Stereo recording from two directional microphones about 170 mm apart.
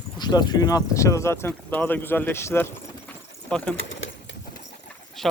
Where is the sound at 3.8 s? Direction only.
90° left.